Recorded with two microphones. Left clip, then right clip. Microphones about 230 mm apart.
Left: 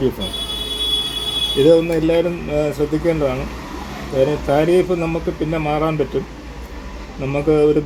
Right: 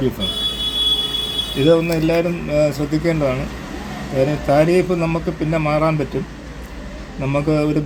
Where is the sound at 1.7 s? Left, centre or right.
Right.